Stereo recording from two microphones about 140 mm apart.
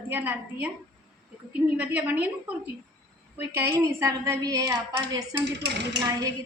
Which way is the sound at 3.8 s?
20° right (ahead or behind).